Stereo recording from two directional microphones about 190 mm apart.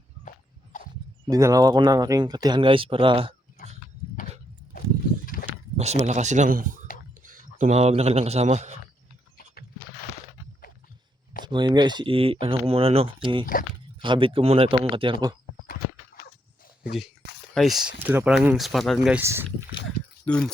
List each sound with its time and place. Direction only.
0.3 s walk: 45° left (ahead or behind)
1.3 s speech: 20° right (ahead or behind)
5.7 s speech: 35° right (ahead or behind)
11.4 s speech: 25° right (ahead or behind)
17.5 s speech: centre (ahead or behind)
19.2 s speech: 15° right (ahead or behind)
20.2 s speech: 5° left (ahead or behind)